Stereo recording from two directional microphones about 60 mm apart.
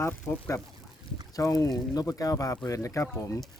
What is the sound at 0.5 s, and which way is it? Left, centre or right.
Speech, left.